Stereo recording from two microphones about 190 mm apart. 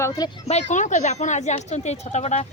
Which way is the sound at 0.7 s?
40° left (ahead or behind).